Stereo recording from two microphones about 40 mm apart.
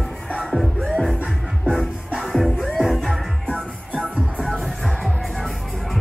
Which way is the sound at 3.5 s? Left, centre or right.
Right.